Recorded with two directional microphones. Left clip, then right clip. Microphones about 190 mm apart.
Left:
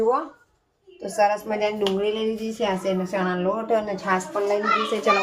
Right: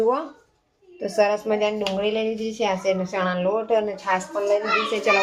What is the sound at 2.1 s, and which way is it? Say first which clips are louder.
A woman's voice: right 2 dB; 45° right (ahead or behind).